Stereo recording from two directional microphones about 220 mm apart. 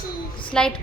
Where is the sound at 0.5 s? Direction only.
5° left (ahead or behind).